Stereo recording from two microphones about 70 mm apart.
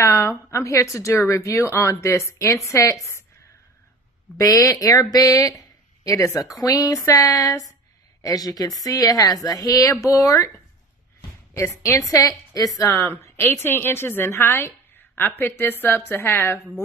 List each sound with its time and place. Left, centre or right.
0.0 s a woman's voice: left
4.4 s a woman's voice: left
11.5 s a woman's voice: left